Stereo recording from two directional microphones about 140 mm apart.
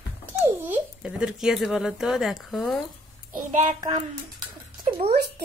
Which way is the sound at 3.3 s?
65° right (ahead or behind).